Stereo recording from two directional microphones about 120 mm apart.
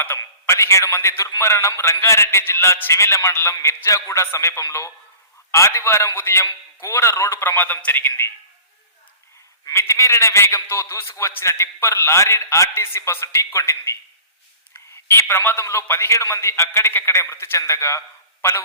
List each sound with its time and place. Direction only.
0.0 s a man's voice: 20° left (ahead or behind)
9.6 s a man's voice: 25° left (ahead or behind)